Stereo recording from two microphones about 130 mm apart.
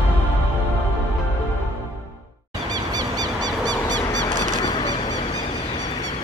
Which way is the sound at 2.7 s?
30° right (ahead or behind).